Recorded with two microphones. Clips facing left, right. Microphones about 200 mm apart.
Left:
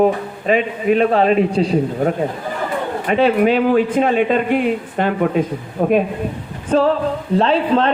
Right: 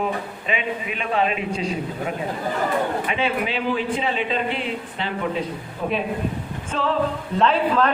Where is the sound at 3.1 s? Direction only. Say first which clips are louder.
Left 10 dB; 45° left (ahead or behind).